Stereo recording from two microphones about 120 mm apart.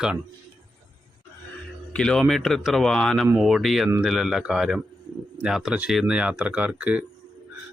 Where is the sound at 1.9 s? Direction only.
5° left (ahead or behind).